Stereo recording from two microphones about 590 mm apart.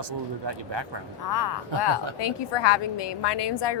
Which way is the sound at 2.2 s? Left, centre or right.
Left.